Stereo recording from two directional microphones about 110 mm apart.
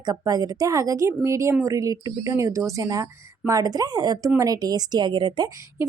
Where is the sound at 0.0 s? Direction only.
35° right (ahead or behind).